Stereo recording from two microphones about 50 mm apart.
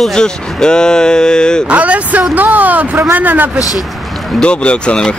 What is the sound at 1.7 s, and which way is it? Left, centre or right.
Speech, right.